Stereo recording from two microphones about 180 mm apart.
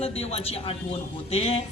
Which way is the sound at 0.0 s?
35° left (ahead or behind).